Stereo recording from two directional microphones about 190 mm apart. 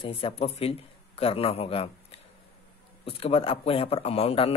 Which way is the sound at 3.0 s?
30° left (ahead or behind).